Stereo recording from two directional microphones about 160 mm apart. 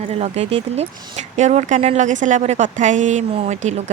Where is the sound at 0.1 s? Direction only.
40° right (ahead or behind).